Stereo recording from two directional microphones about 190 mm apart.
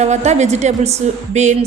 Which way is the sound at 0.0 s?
35° right (ahead or behind).